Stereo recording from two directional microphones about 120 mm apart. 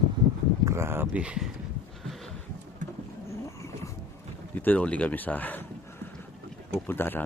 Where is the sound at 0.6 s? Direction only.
20° right (ahead or behind).